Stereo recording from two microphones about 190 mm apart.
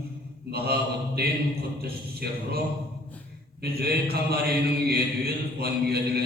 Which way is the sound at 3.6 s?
55° right (ahead or behind).